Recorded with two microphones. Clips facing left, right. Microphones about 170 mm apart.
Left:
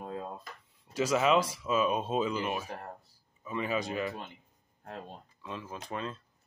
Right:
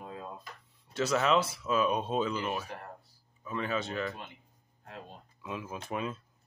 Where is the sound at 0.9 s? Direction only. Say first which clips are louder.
Left 1 dB; 10° left (ahead or behind).